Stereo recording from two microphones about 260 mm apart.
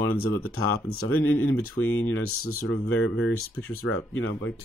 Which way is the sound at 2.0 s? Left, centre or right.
Left.